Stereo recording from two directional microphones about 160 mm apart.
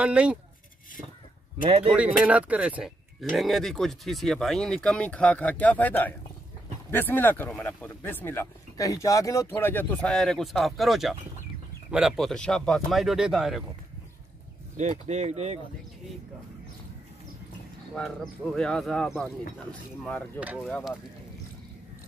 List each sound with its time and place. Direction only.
0.0 s speech: 10° right (ahead or behind)
1.6 s a man's voice: 35° right (ahead or behind)
1.9 s speech: 10° right (ahead or behind)
14.8 s speech: 45° right (ahead or behind)
17.9 s speech: centre (ahead or behind)
20.3 s speech: 10° right (ahead or behind)